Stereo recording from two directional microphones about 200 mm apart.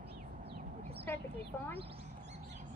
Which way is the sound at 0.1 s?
55° right (ahead or behind).